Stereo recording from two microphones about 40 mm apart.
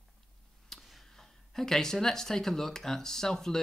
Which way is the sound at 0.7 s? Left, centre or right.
Centre.